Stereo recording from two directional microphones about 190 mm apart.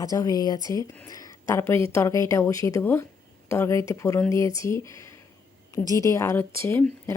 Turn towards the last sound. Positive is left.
turn(degrees=15)  # may be behind; listen again after turning